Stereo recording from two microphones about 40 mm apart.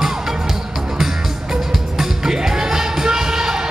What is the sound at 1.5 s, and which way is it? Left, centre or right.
Music, centre.